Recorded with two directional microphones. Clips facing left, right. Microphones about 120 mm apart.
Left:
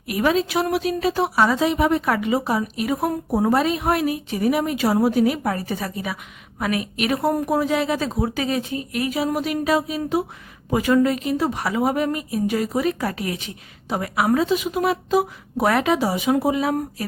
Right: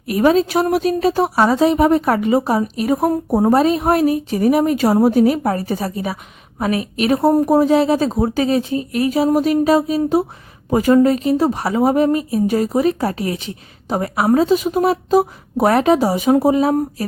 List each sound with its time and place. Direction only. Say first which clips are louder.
0.0 s speech: right 6 dB; 35° right (ahead or behind)